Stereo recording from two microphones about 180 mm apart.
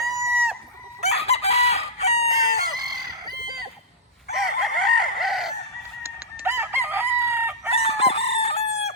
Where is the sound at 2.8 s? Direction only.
20° right (ahead or behind).